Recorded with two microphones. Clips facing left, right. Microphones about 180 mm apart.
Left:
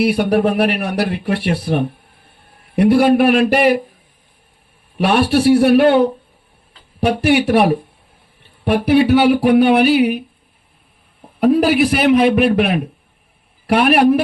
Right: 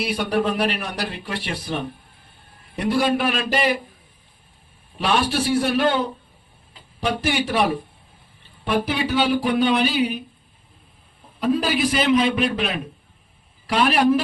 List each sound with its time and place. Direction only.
0.0 s speech: 60° left (ahead or behind)
4.9 s speech: 60° left (ahead or behind)
11.3 s speech: 65° left (ahead or behind)